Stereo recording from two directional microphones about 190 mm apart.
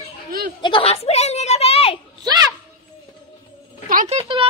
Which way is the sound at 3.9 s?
40° right (ahead or behind).